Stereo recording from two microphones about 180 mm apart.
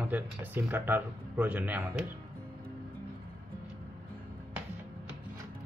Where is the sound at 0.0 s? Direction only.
10° right (ahead or behind).